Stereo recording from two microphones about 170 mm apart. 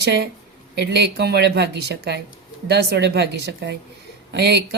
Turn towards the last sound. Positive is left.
turn(degrees=-80)